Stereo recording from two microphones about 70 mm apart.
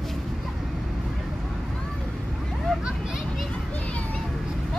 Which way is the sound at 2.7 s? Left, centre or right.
Centre.